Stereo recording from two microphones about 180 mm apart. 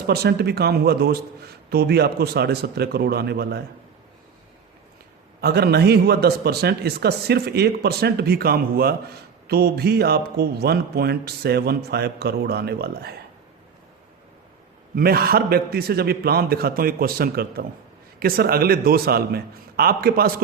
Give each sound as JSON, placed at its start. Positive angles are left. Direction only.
{"t": 0.1, "sound": "speech", "side_deg": -60}
{"t": 5.4, "sound": "speech", "side_deg": -60}
{"t": 14.9, "sound": "speech", "side_deg": -55}